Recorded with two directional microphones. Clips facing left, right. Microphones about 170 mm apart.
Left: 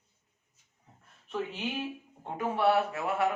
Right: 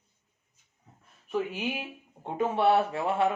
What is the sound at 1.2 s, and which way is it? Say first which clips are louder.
Speech: right 4 dB; 10° right (ahead or behind).